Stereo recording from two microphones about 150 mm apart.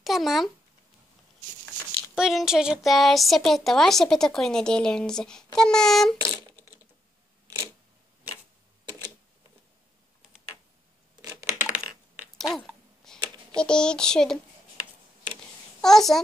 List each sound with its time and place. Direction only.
0.0 s speech: centre (ahead or behind)
2.1 s speech: 5° right (ahead or behind)
7.4 s camera: 20° right (ahead or behind)
11.6 s typing: 10° right (ahead or behind)
12.4 s a sound: centre (ahead or behind)
13.6 s speech: 5° left (ahead or behind)
15.8 s a child's voice: centre (ahead or behind)